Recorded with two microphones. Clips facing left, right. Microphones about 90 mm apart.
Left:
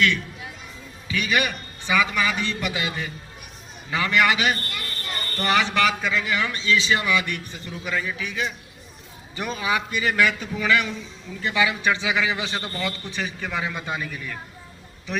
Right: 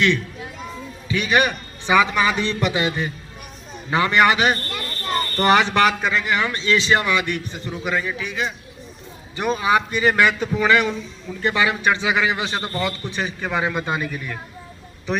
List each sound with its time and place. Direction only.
1.0 s a man's voice: 30° right (ahead or behind); by 14.3 s 55° right (ahead or behind)